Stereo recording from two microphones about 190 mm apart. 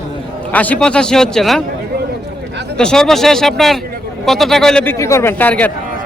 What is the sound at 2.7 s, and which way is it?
A man's voice, 5° left (ahead or behind).